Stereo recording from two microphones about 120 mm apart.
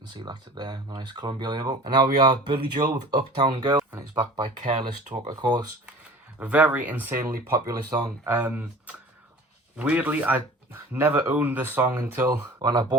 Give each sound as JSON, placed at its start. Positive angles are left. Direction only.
{"t": 0.2, "sound": "speech", "side_deg": -35}
{"t": 4.6, "sound": "speech", "side_deg": -65}
{"t": 5.2, "sound": "speech", "side_deg": -35}
{"t": 6.4, "sound": "speech", "side_deg": -15}
{"t": 8.3, "sound": "speech", "side_deg": -15}
{"t": 12.5, "sound": "speech", "side_deg": -35}